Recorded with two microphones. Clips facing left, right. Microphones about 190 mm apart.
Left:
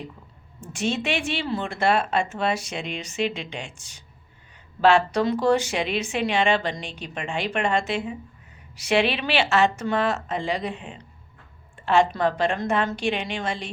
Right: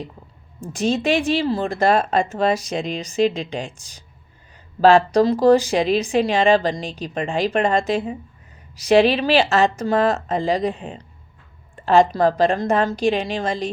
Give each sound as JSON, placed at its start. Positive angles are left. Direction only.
{"t": 0.6, "sound": "speech", "side_deg": -35}